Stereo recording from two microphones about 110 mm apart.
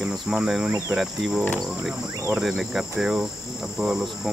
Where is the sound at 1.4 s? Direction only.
10° left (ahead or behind).